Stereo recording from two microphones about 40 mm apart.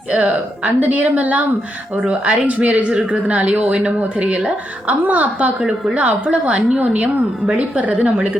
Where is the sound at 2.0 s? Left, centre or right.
Right.